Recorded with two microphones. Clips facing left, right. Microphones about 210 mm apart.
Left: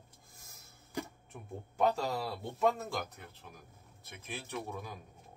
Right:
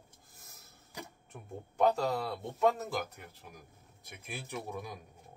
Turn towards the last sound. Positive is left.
turn(degrees=-10)  # may be behind; listen again after turning